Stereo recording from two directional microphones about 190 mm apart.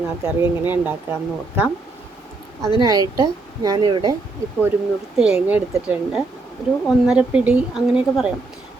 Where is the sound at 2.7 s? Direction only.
20° right (ahead or behind).